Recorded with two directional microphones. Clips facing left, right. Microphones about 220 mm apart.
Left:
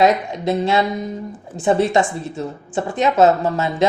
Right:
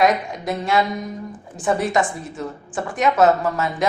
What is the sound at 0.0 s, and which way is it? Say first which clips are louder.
A woman's voice: left 3 dB; 25° left (ahead or behind).